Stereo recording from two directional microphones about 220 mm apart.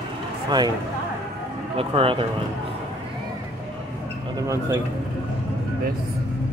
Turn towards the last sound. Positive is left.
turn(degrees=-15)  # may be behind; listen again after turning